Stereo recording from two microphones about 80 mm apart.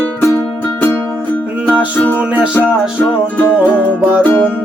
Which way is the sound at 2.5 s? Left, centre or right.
Left.